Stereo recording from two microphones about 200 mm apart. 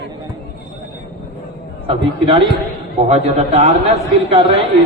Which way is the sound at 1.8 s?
25° right (ahead or behind).